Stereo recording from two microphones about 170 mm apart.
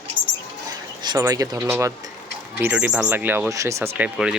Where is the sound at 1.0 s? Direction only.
20° right (ahead or behind).